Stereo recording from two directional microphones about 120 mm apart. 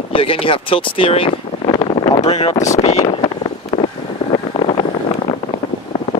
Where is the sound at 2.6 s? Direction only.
75° left (ahead or behind).